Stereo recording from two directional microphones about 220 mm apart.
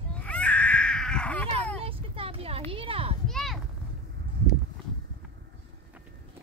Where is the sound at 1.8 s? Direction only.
25° right (ahead or behind).